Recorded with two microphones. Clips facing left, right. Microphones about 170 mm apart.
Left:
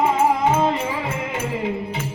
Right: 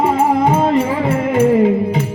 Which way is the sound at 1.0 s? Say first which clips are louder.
Right 13 dB; 55° right (ahead or behind).